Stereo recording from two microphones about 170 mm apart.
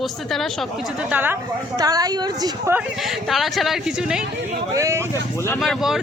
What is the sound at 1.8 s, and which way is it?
Speech, 20° right (ahead or behind).